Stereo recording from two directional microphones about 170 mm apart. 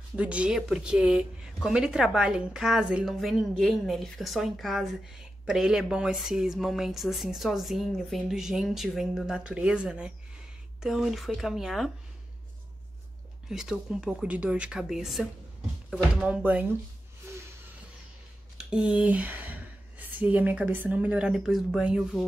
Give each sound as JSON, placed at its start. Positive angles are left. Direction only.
{"t": 0.1, "sound": "a woman's voice", "side_deg": -5}
{"t": 13.5, "sound": "a woman's voice", "side_deg": -5}
{"t": 17.2, "sound": "a sound", "side_deg": -15}
{"t": 18.7, "sound": "speech", "side_deg": -5}